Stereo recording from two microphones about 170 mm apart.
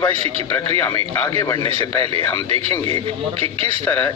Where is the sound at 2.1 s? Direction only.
35° right (ahead or behind).